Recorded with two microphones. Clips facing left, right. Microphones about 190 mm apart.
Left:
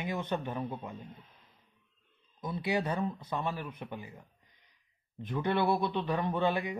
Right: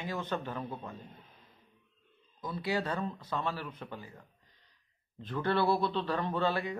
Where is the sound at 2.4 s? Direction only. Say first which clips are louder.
Left 2 dB; 20° left (ahead or behind).